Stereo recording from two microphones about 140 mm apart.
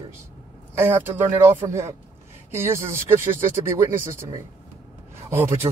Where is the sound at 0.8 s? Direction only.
15° right (ahead or behind).